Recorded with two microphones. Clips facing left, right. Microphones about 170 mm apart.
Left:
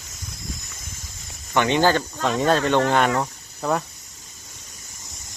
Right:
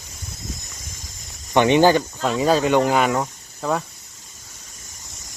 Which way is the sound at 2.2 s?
5° right (ahead or behind).